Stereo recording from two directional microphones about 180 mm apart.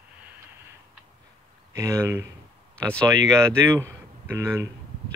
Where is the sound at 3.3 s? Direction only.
15° right (ahead or behind).